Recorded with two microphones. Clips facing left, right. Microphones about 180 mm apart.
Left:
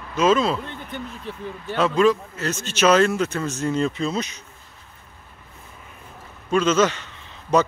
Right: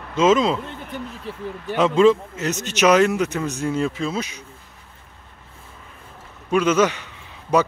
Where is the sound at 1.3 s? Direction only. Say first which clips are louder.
Right 1 dB; 5° right (ahead or behind).